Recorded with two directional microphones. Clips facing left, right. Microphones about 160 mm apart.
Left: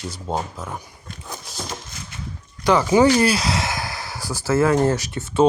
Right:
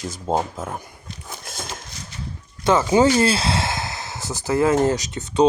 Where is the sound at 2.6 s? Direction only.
25° right (ahead or behind).